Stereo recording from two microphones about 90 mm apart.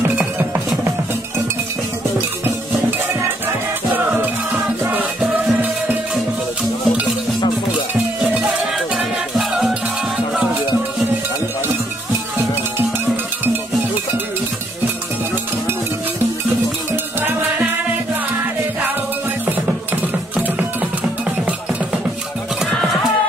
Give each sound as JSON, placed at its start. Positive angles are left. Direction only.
{"t": 3.9, "sound": "music", "side_deg": -20}
{"t": 8.4, "sound": "music", "side_deg": -5}
{"t": 20.3, "sound": "music", "side_deg": -15}